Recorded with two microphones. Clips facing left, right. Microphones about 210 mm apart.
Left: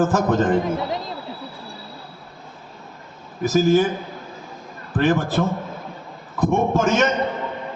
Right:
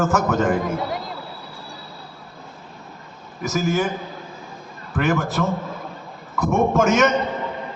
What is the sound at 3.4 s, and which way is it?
Speech, 35° left (ahead or behind).